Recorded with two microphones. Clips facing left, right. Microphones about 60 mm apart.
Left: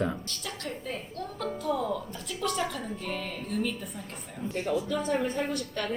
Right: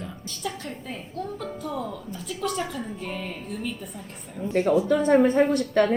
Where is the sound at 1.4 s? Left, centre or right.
Centre.